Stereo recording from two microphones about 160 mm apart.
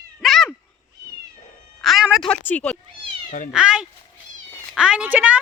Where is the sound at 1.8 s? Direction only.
Centre (ahead or behind).